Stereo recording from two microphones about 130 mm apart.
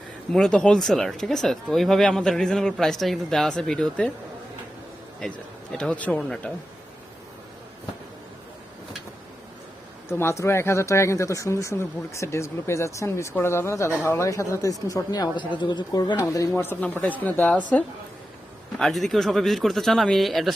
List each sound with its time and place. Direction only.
0.3 s speech: 5° left (ahead or behind)
5.2 s speech: 5° left (ahead or behind)
10.1 s speech: 20° left (ahead or behind)
16.6 s a woman's voice: 15° left (ahead or behind)